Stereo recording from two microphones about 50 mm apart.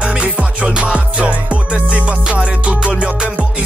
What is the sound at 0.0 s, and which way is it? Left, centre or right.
Music, right.